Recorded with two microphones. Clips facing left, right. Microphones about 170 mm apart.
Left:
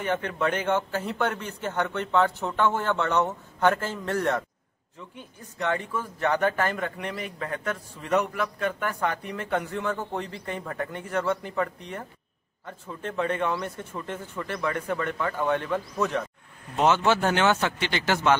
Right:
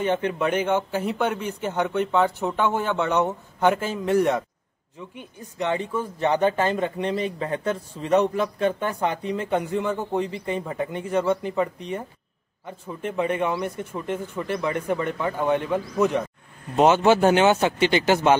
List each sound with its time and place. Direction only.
0.0 s speech: 20° right (ahead or behind)